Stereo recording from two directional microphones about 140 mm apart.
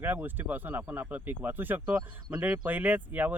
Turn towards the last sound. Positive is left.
turn(degrees=-10)  # may be behind; listen again after turning